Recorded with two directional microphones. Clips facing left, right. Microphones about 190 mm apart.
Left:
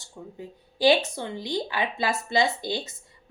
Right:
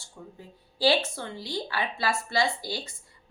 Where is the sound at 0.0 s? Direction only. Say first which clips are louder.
Left 5 dB; 20° left (ahead or behind).